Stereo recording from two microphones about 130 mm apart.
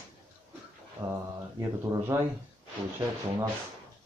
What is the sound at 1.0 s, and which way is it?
Mantra, 35° right (ahead or behind).